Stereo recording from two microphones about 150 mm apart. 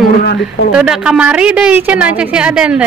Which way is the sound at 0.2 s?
90° left.